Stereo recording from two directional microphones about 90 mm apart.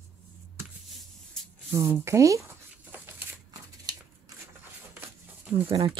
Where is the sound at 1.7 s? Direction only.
30° right (ahead or behind).